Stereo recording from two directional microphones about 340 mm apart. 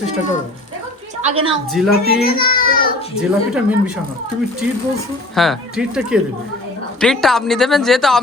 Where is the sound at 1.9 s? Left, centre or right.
Left.